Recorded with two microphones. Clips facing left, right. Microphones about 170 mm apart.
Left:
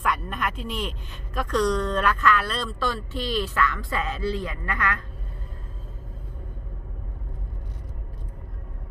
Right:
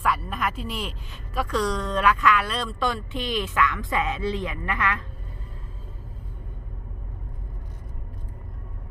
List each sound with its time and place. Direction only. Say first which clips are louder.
0.0 s speech: right 1 dB; 5° right (ahead or behind); by 4.9 s 25° right (ahead or behind)